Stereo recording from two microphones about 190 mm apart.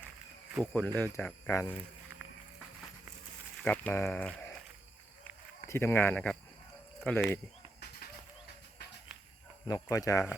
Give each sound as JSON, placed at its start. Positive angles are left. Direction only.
{"t": 0.6, "sound": "speech", "side_deg": 10}
{"t": 3.6, "sound": "speech", "side_deg": 10}
{"t": 5.6, "sound": "speech", "side_deg": 10}
{"t": 9.6, "sound": "speech", "side_deg": 20}